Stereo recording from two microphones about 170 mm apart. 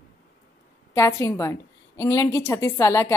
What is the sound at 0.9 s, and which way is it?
A woman's voice, 20° left (ahead or behind).